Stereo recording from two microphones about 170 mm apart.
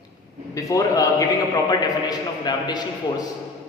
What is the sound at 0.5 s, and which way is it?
A man's voice, 20° left (ahead or behind).